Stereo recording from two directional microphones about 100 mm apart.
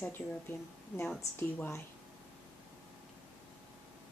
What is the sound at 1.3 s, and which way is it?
Speech, 20° left (ahead or behind).